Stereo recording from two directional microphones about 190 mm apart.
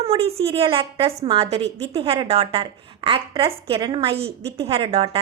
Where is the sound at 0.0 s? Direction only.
30° right (ahead or behind).